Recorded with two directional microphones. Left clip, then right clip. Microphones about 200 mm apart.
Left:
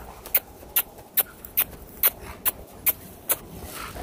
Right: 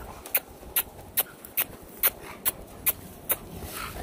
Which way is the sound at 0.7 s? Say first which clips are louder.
Left 2 dB; 10° left (ahead or behind).